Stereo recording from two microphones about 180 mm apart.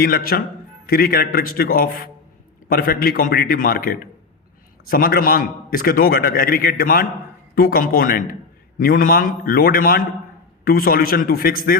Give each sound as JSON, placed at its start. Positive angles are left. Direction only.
{"t": 0.0, "sound": "a man's voice", "side_deg": 55}